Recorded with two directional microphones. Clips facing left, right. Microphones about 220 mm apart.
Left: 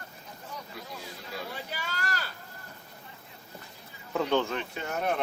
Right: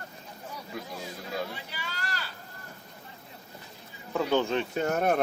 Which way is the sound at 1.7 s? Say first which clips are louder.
Left 3 dB; 45° left (ahead or behind).